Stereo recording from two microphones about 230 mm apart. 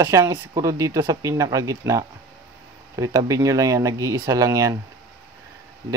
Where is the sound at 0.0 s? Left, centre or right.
Centre.